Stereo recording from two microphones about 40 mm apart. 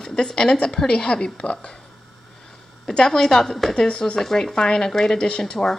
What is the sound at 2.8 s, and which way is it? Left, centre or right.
Speech, centre.